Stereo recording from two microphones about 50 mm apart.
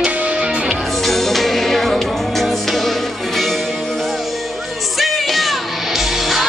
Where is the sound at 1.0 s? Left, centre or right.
Centre.